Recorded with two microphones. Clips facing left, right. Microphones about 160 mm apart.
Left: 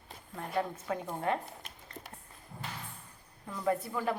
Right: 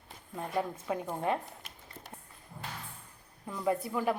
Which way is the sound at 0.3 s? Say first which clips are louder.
Right 1 dB; 15° right (ahead or behind).